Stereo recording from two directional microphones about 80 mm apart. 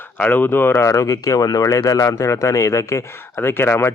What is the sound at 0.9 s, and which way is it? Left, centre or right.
Speech, left.